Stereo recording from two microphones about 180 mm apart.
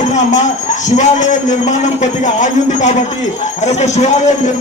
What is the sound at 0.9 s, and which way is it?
A man's voice, 45° left (ahead or behind).